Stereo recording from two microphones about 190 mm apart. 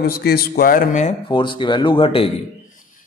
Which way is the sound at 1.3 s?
25° left (ahead or behind).